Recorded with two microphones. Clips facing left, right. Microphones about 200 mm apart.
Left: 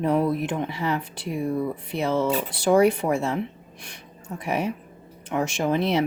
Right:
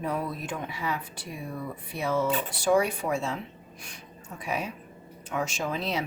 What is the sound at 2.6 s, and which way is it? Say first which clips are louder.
Speech: left 6 dB; 60° left (ahead or behind).